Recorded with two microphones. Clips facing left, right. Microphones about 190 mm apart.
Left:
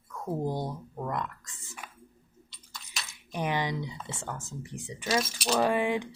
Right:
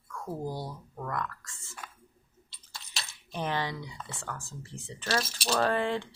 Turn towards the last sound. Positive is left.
turn(degrees=15)  # may be behind; listen again after turning